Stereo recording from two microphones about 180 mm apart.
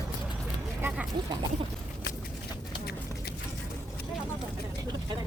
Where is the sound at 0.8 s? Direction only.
15° right (ahead or behind).